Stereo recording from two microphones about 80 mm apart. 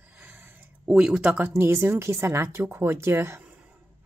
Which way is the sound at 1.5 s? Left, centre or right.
Right.